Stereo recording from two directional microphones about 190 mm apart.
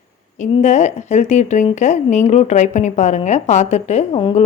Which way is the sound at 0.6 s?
40° left (ahead or behind).